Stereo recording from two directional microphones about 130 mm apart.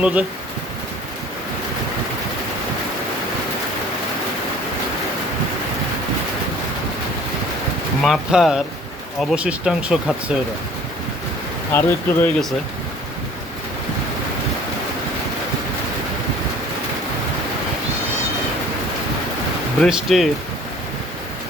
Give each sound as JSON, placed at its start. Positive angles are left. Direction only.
{"t": 0.0, "sound": "speech", "side_deg": -10}
{"t": 8.0, "sound": "speech", "side_deg": -5}
{"t": 11.7, "sound": "speech", "side_deg": 20}
{"t": 19.8, "sound": "speech", "side_deg": 0}